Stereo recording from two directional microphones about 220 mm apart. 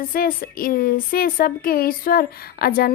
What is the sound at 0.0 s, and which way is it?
Speech, 40° left (ahead or behind).